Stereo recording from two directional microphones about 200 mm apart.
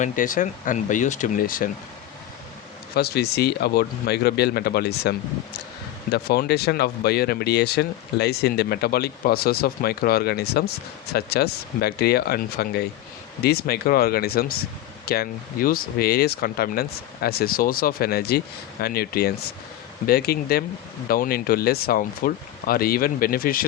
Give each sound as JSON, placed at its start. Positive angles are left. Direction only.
{"t": 0.0, "sound": "speech", "side_deg": 40}
{"t": 2.9, "sound": "speech", "side_deg": 50}